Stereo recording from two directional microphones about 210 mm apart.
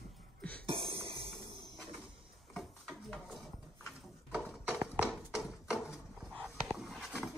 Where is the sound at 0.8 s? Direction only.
25° right (ahead or behind).